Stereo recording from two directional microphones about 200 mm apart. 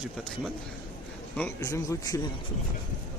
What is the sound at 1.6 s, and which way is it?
Speech, 15° left (ahead or behind).